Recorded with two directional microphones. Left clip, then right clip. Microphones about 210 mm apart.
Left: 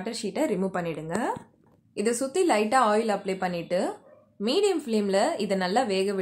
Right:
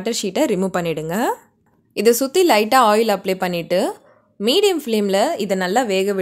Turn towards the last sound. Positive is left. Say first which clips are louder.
# right 7 dB
turn(degrees=-30)  # may be behind; listen again after turning